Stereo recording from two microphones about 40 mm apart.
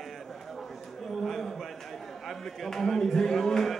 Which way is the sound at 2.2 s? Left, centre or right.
Centre.